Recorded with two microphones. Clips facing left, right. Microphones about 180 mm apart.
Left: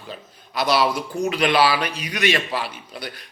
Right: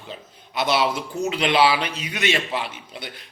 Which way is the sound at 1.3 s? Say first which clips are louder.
Even; 20° right (ahead or behind).